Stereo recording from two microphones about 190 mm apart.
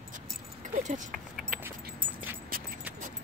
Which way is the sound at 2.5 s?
50° right (ahead or behind).